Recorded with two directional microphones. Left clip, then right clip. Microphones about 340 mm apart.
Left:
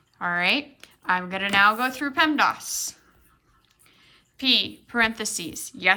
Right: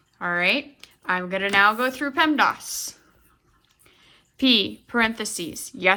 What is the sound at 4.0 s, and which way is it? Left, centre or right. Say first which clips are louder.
A woman's voice: right 7 dB; centre.